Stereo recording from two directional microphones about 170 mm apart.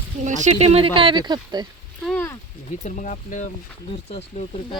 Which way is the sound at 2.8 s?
50° left (ahead or behind).